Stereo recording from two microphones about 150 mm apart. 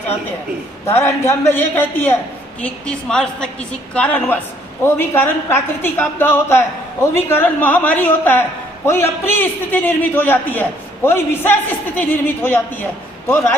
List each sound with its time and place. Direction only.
0.9 s a woman's voice: 20° left (ahead or behind)